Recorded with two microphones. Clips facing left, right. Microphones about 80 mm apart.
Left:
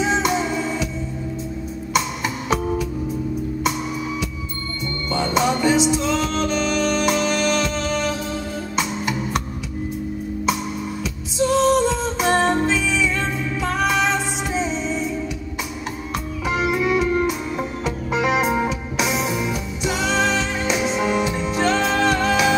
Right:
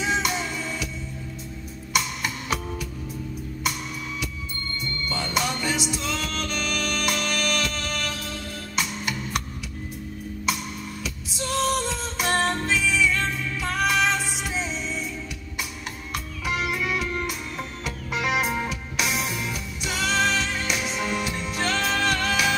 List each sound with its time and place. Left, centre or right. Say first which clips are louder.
0.4 s music: left 8 dB; centre
2.0 s music: left 4 dB; centre
5.3 s music: left 9 dB; centre
11.3 s music: left 9 dB; centre
14.5 s music: left 9 dB; left
14.9 s music: left 8 dB; centre
16.4 s music: left 7 dB; centre